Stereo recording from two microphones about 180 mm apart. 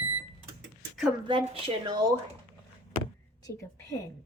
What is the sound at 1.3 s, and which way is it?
Speech, 25° right (ahead or behind).